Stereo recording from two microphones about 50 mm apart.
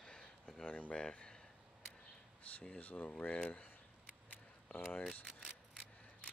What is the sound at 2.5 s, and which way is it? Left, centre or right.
Speech, left.